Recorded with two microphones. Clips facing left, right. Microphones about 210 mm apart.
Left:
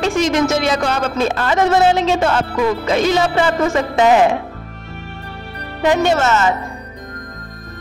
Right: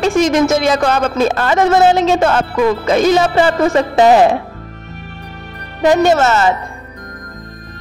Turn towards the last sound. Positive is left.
turn(degrees=-35)  # may be behind; listen again after turning